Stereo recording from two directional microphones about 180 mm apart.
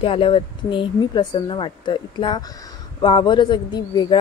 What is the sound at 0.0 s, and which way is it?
Speech, 30° left (ahead or behind).